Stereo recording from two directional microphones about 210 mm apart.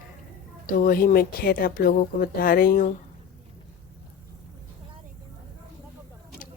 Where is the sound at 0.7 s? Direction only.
45° left (ahead or behind).